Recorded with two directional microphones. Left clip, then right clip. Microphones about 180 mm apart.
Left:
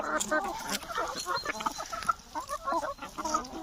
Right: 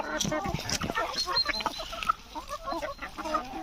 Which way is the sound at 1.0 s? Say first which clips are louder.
Right 5 dB; 50° left (ahead or behind).